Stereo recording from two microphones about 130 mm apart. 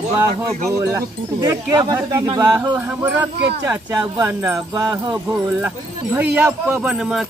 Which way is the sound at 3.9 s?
25° right (ahead or behind).